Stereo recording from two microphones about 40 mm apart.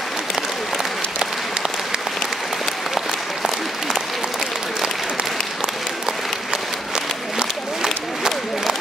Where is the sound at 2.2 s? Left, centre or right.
Centre.